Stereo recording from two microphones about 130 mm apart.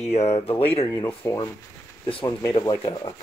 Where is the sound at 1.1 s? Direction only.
15° left (ahead or behind).